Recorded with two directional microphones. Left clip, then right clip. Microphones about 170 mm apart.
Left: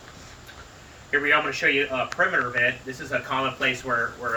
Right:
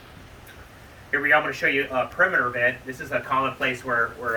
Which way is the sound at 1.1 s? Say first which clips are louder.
Right 1 dB; 15° left (ahead or behind).